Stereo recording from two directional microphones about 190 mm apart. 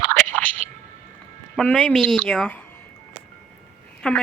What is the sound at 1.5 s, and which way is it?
Speech, 5° left (ahead or behind).